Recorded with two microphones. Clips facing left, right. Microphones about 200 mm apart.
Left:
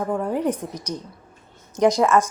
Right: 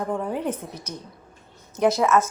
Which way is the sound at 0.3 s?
10° left (ahead or behind).